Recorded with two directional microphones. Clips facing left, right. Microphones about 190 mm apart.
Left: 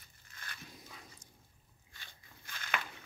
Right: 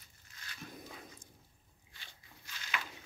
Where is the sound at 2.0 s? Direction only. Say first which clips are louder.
Even; 55° left (ahead or behind).